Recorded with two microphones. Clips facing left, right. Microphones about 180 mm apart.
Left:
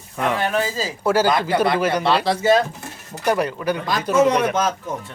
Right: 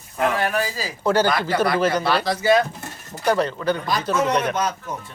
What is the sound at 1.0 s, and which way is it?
Speech, 5° left (ahead or behind).